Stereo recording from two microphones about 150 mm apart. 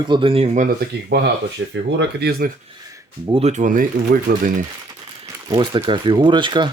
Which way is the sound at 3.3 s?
45° right (ahead or behind).